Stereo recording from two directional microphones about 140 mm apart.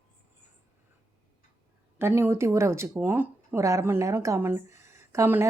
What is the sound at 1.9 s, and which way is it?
Speech, 15° right (ahead or behind).